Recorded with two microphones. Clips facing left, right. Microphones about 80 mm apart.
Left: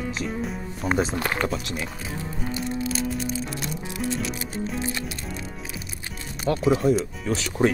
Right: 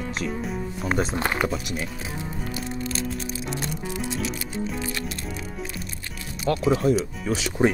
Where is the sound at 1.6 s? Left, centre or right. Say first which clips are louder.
Right 1 dB; right.